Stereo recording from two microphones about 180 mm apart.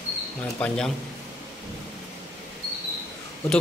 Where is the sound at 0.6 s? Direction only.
5° left (ahead or behind).